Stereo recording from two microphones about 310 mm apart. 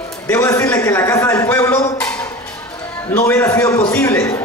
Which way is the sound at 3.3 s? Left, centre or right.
Centre.